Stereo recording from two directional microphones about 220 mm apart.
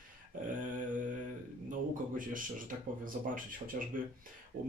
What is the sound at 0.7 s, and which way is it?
Mantra, 35° right (ahead or behind).